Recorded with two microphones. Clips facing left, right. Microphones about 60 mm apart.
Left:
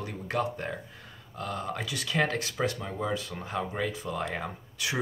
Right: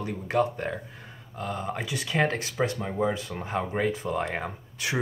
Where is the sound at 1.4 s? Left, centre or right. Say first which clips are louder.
Right 2 dB; right.